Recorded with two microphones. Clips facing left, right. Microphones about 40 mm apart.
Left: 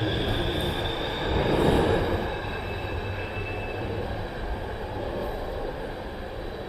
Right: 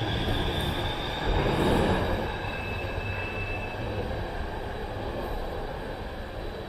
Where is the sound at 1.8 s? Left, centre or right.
Left.